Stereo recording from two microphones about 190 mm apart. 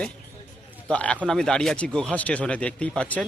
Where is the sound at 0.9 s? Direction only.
5° left (ahead or behind).